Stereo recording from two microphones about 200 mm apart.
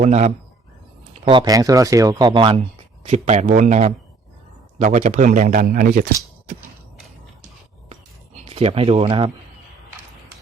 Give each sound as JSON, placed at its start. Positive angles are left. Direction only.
{"t": 0.0, "sound": "speech", "side_deg": -35}
{"t": 8.4, "sound": "speech", "side_deg": -30}